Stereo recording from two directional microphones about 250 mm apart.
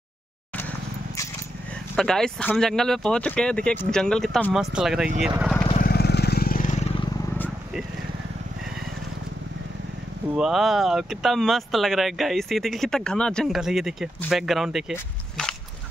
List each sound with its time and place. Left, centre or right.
2.0 s speech: centre
5.8 s vehicle: left
7.3 s vehicle: centre
10.3 s speech: centre